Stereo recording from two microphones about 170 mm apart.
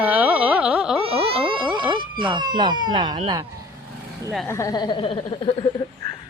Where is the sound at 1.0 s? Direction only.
35° right (ahead or behind).